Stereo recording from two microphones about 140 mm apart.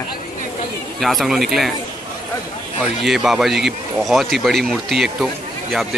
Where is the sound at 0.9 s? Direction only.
Centre (ahead or behind).